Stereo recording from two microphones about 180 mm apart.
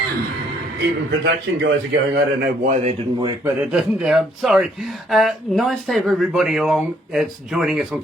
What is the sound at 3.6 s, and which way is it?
Speech, 5° right (ahead or behind).